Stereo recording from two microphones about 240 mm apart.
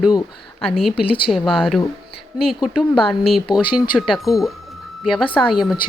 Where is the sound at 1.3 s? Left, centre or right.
Centre.